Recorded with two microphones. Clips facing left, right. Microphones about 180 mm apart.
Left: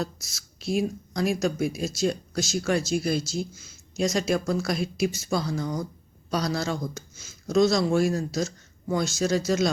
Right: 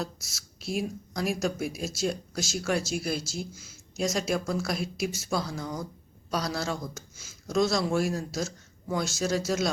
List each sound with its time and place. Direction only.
0.0 s speech: 5° right (ahead or behind)